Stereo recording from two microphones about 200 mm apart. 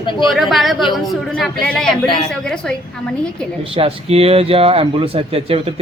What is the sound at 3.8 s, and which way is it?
Speech, 30° right (ahead or behind).